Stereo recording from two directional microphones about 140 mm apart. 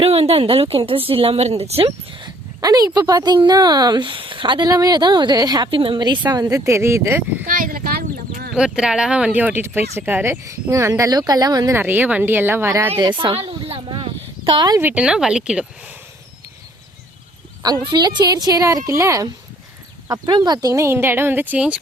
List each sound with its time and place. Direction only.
0.0 s a woman's voice: 45° right (ahead or behind)
2.2 s speech: 25° right (ahead or behind)
7.4 s a sound: 90° right
8.5 s speech: 5° right (ahead or behind); by 11.8 s 25° right (ahead or behind)
11.8 s speech: 15° right (ahead or behind)
13.0 s a sound: 35° right (ahead or behind)
14.4 s speech: 35° right (ahead or behind)
14.8 s speech: 10° right (ahead or behind)
17.8 s speech: 30° right (ahead or behind); by 21.8 s 10° right (ahead or behind)